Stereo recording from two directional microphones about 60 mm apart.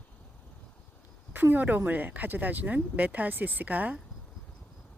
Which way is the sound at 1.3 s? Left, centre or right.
Right.